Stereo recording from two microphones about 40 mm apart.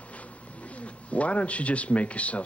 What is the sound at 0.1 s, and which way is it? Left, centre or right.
Speech, left.